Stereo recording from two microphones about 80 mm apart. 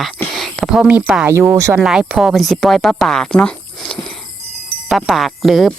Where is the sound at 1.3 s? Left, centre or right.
Right.